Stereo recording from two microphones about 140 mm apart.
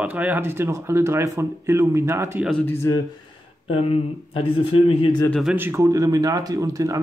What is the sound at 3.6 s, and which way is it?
Speech, 45° left (ahead or behind).